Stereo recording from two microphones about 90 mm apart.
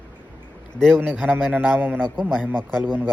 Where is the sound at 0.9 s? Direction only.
20° right (ahead or behind).